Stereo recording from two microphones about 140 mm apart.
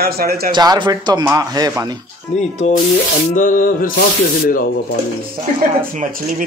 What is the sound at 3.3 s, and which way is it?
Music, 70° left (ahead or behind).